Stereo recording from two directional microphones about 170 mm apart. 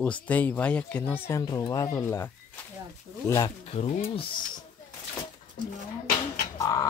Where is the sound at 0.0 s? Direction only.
10° left (ahead or behind).